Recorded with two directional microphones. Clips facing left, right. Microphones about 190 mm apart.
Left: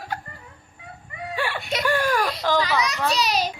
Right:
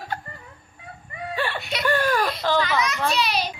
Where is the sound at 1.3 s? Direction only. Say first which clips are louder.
Even; 10° left (ahead or behind).